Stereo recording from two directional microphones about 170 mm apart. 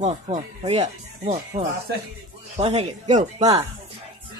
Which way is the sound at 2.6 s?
40° right (ahead or behind).